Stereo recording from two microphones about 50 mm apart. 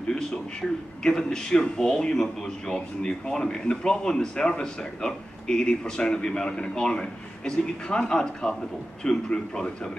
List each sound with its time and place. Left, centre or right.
0.1 s speech: centre